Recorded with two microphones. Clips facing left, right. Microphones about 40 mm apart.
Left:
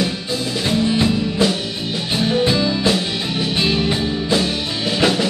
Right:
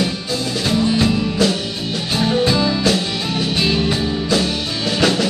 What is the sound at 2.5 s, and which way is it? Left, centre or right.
Music, centre.